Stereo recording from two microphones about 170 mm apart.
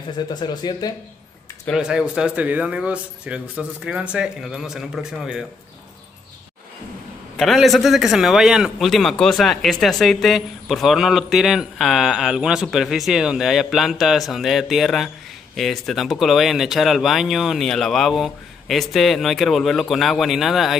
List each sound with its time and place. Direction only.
0.3 s speech: 25° left (ahead or behind)
1.7 s a man's voice: 5° right (ahead or behind)
7.3 s a man's voice: centre (ahead or behind)